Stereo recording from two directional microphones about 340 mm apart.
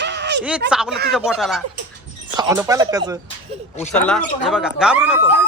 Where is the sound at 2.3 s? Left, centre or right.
Centre.